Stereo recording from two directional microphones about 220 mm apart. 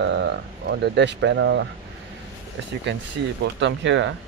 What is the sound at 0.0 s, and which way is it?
Speech, 50° right (ahead or behind).